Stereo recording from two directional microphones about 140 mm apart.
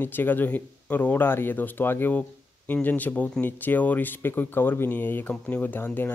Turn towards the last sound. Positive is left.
turn(degrees=10)  # may be behind; listen again after turning